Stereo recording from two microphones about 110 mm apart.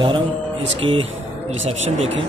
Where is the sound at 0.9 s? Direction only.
65° right (ahead or behind).